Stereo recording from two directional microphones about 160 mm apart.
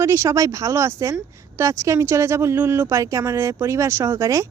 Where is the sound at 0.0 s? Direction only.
15° right (ahead or behind).